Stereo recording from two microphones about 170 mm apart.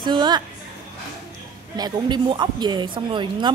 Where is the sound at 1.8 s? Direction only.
25° right (ahead or behind).